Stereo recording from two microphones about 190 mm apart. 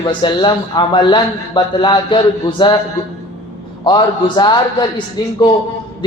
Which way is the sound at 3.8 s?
25° left (ahead or behind).